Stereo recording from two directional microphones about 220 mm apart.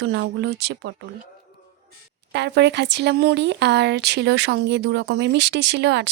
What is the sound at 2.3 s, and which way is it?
Speech, 50° right (ahead or behind).